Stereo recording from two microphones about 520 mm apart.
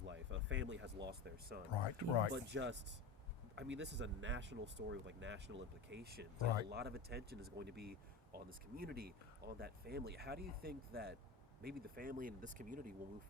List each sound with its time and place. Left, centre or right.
0.0 s speech: right
1.7 s speech: left
2.3 s speech: centre